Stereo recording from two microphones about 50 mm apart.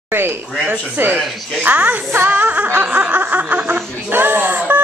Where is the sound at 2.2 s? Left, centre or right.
Right.